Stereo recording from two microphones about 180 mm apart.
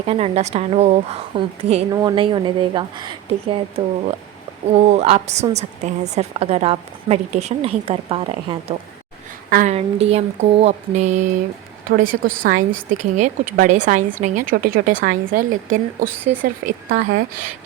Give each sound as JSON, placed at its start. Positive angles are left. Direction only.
{"t": 0.0, "sound": "a woman's voice", "side_deg": -35}
{"t": 1.9, "sound": "a woman's voice", "side_deg": -20}
{"t": 9.5, "sound": "speech", "side_deg": -50}
{"t": 9.7, "sound": "a woman's voice", "side_deg": -35}
{"t": 11.9, "sound": "speech", "side_deg": -50}
{"t": 14.5, "sound": "speech", "side_deg": -55}